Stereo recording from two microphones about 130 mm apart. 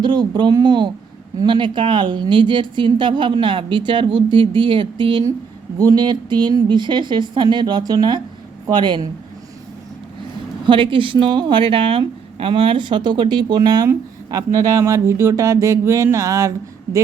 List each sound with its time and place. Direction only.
0.0 s a woman's voice: 35° right (ahead or behind)
10.7 s a woman's voice: 40° right (ahead or behind); by 16.5 s 25° right (ahead or behind)